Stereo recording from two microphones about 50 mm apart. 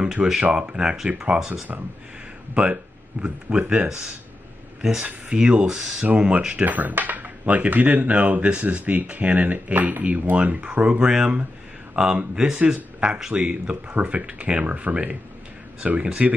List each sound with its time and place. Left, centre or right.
0.0 s speech: centre
2.5 s speech: right
5.0 s speech: right
6.0 s speech: right
6.6 s speech: right
16.0 s speech: centre